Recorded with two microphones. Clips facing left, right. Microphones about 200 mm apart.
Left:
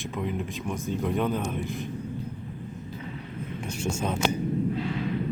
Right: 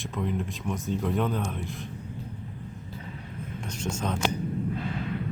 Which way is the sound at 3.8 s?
10° left (ahead or behind).